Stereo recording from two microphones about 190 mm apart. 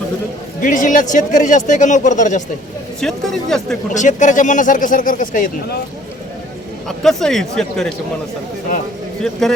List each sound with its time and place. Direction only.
0.6 s speech: 45° left (ahead or behind)
3.0 s speech: centre (ahead or behind)
3.9 s speech: 40° left (ahead or behind)
6.8 s speech: centre (ahead or behind)
9.2 s speech: centre (ahead or behind)